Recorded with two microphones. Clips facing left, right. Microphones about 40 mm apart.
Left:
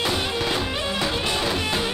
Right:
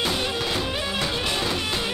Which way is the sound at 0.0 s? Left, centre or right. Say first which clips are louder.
Left 1 dB; centre.